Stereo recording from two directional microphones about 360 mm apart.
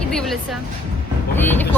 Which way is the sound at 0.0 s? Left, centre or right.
Centre.